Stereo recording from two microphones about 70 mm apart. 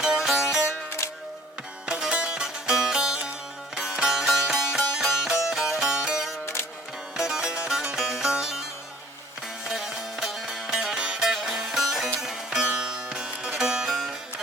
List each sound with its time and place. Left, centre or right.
0.0 s music: centre
1.9 s music: centre
6.4 s music: left
7.2 s music: centre
9.6 s music: centre